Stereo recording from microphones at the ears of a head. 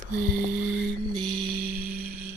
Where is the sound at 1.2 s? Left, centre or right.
Right.